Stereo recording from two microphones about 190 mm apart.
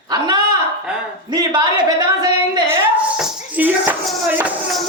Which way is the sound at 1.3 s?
20° right (ahead or behind).